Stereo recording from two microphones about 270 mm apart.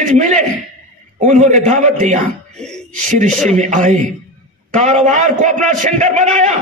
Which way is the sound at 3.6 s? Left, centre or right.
Right.